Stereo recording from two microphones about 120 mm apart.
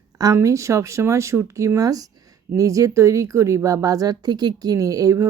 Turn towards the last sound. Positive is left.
turn(degrees=-25)  # may be behind; listen again after turning